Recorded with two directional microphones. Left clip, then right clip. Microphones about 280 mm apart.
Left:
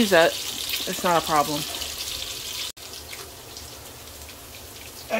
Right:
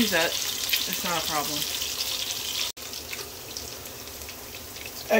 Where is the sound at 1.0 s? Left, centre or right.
Centre.